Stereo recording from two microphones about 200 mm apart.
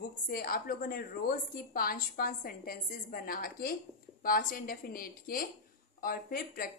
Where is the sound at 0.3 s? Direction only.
45° left (ahead or behind).